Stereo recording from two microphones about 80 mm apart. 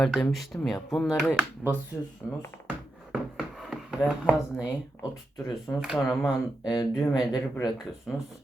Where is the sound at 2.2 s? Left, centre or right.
Centre.